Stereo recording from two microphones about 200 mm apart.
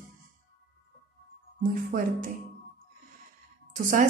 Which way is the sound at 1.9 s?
40° right (ahead or behind).